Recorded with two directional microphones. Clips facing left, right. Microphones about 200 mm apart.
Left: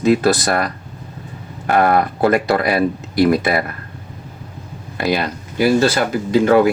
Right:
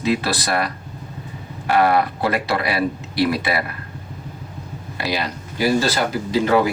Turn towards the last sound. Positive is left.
turn(degrees=55)  # may be behind; listen again after turning